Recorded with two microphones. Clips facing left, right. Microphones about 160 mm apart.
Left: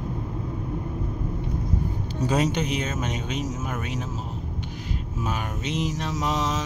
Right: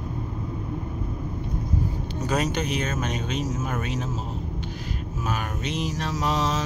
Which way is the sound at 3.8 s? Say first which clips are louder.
Right 2 dB; 15° left (ahead or behind).